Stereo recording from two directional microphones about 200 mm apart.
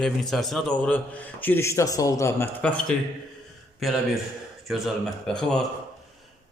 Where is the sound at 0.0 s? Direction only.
Centre (ahead or behind).